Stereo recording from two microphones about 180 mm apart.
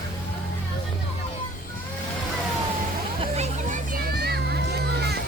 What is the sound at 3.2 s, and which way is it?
Hubbub, 35° right (ahead or behind).